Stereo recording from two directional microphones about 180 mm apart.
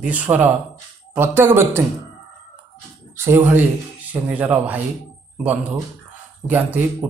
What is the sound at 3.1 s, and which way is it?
Speech, 15° right (ahead or behind).